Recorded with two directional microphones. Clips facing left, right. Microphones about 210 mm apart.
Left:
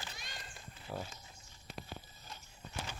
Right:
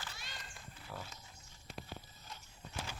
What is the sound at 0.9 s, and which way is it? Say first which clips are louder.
Speech: left 6 dB; 25° left (ahead or behind).